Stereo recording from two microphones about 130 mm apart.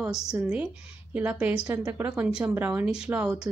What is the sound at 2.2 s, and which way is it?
A woman's voice, 5° right (ahead or behind).